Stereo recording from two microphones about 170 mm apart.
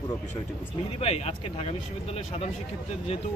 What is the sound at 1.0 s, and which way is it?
Speech, 35° left (ahead or behind).